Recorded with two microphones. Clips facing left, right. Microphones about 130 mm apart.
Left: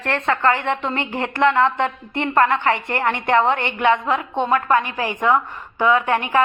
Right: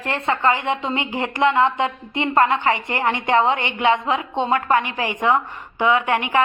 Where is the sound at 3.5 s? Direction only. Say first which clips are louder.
Left 1 dB; 55° left (ahead or behind).